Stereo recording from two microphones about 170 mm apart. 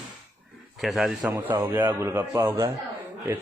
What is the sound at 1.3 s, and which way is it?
Speech, 10° right (ahead or behind).